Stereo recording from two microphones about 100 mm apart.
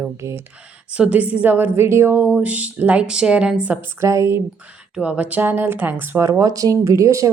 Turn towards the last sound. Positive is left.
turn(degrees=-30)  # may be behind; listen again after turning